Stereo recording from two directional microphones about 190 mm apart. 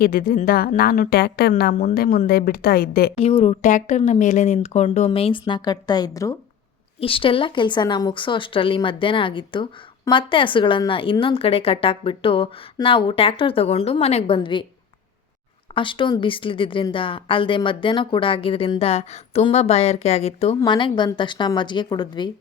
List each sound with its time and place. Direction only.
0.0 s a woman's voice: 50° left (ahead or behind)
3.2 s a woman's voice: 30° left (ahead or behind)
15.7 s a woman's voice: 25° left (ahead or behind)